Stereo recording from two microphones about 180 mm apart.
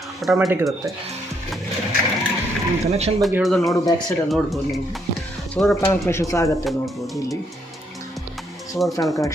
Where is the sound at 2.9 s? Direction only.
35° right (ahead or behind).